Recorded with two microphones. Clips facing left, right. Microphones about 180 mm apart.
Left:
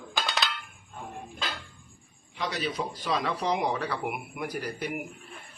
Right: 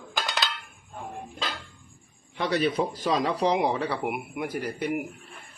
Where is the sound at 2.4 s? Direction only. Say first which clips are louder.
Right 7 dB; 60° right (ahead or behind).